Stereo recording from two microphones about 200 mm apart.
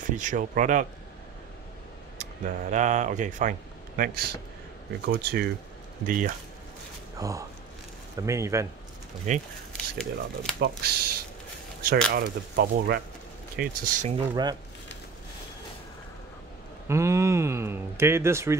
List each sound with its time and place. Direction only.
0.2 s speech: 40° right (ahead or behind)
2.1 s speech: 35° right (ahead or behind)
7.2 s speech: 15° right (ahead or behind)
9.3 s speech: 35° right (ahead or behind)
9.7 s speech: 5° left (ahead or behind)
10.8 s speech: 50° right (ahead or behind)
13.6 s speech: 40° right (ahead or behind)
14.3 s speech: 20° right (ahead or behind)
16.8 s speech: 15° right (ahead or behind)